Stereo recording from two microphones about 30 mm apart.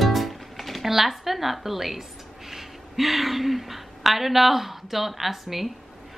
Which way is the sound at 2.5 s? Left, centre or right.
Centre.